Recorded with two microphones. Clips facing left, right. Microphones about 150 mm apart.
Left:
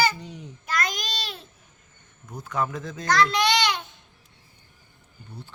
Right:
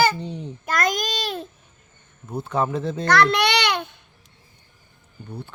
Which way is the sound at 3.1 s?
65° right (ahead or behind).